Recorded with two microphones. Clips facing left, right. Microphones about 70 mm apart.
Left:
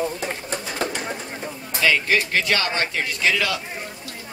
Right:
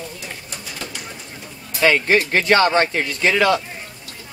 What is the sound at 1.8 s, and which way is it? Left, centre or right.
A man's voice, right.